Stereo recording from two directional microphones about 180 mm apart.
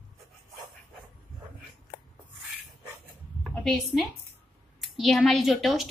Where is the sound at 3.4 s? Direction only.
Centre (ahead or behind).